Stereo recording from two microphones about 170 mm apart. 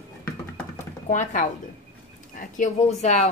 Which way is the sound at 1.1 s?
50° left (ahead or behind).